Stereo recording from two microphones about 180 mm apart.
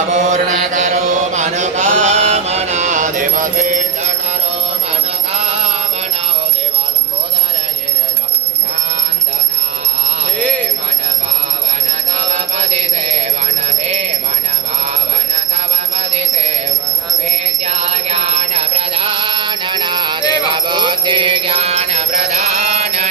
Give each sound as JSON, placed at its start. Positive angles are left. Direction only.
{"t": 0.1, "sound": "mantra", "side_deg": -40}
{"t": 5.3, "sound": "music", "side_deg": -35}
{"t": 12.3, "sound": "music", "side_deg": -35}
{"t": 16.0, "sound": "music", "side_deg": -35}
{"t": 17.6, "sound": "music", "side_deg": -35}
{"t": 20.5, "sound": "mantra", "side_deg": -25}